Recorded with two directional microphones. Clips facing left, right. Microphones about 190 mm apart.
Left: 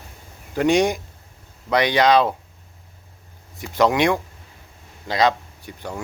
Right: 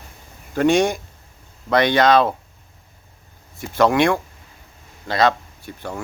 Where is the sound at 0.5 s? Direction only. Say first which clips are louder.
Right 1 dB; 15° left (ahead or behind).